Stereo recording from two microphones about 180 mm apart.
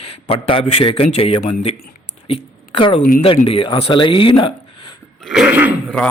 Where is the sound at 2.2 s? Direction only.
30° left (ahead or behind).